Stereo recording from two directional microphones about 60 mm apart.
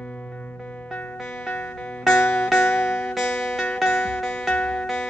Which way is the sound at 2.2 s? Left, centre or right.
Left.